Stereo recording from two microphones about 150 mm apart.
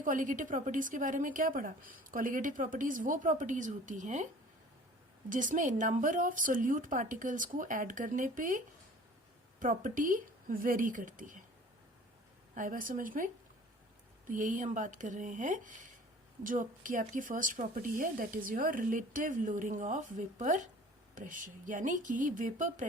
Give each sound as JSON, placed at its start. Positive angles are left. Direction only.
{"t": 0.0, "sound": "a woman's voice", "side_deg": -65}
{"t": 5.3, "sound": "a woman's voice", "side_deg": -60}
{"t": 12.5, "sound": "a woman's voice", "side_deg": -65}